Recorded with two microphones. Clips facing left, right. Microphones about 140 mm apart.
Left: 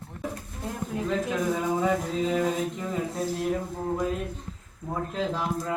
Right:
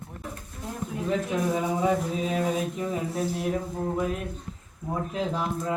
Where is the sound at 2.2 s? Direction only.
20° right (ahead or behind).